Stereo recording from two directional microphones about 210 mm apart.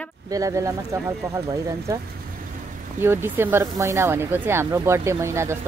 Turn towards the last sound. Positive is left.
turn(degrees=-15)  # may be behind; listen again after turning